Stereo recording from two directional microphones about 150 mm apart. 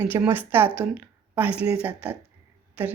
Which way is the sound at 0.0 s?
10° right (ahead or behind).